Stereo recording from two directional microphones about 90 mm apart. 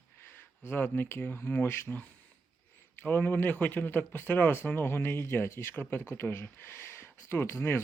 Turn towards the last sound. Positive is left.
turn(degrees=25)  # may be behind; listen again after turning